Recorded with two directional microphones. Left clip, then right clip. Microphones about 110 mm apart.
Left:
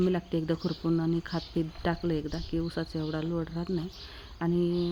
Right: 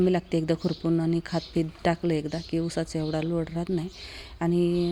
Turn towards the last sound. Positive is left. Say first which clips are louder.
# right 4 dB
turn(degrees=-25)  # may be behind; listen again after turning